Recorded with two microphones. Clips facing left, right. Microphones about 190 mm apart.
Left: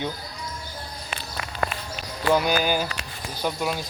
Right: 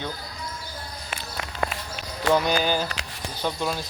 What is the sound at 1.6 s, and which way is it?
Run, 25° right (ahead or behind).